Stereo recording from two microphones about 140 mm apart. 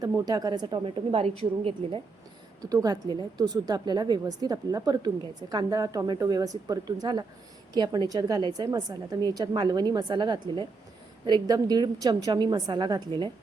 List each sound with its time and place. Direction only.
0.0 s a woman's voice: 30° right (ahead or behind)
1.1 s a woman's voice: 45° right (ahead or behind)
2.6 s a woman's voice: 25° right (ahead or behind)